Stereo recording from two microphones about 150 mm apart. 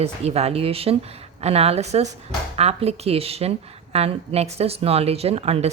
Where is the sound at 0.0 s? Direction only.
45° right (ahead or behind).